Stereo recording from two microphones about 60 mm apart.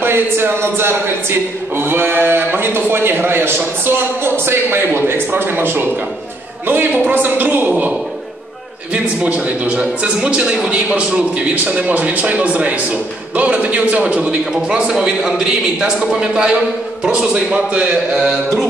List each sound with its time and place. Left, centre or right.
0.0 s speech: right
8.9 s a man's voice: right